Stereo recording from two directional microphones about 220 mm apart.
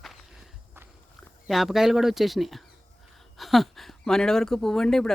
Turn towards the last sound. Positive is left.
turn(degrees=0)  # may be behind; listen again after turning